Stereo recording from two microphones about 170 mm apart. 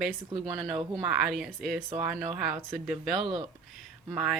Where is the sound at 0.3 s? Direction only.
30° right (ahead or behind).